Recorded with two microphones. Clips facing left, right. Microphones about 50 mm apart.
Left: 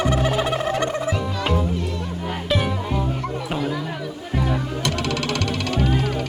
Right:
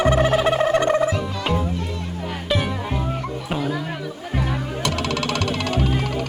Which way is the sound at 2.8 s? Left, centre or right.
Centre.